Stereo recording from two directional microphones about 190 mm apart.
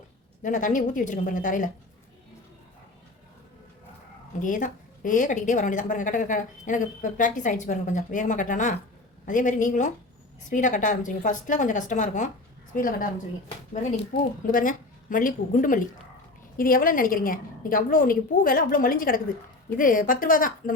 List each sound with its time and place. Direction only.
0.4 s a woman's voice: 45° left (ahead or behind)
4.4 s a woman's voice: 40° left (ahead or behind)
14.4 s a woman's voice: 45° left (ahead or behind)